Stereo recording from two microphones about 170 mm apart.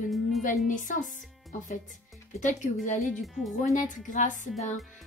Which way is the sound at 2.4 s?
45° left (ahead or behind).